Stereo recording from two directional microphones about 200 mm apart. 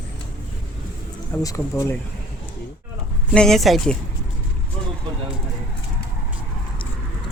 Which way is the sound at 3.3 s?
Centre (ahead or behind).